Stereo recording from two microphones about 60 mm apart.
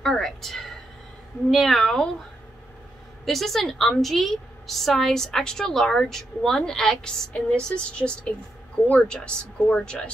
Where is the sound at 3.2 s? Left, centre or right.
Centre.